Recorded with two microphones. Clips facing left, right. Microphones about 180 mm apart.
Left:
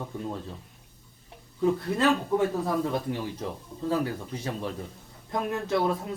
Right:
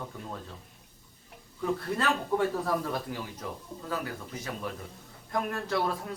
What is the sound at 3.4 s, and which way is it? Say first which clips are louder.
A man's voice: left 6 dB; 30° left (ahead or behind).